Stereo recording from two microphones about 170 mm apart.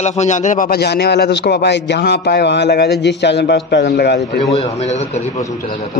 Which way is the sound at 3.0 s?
90° left.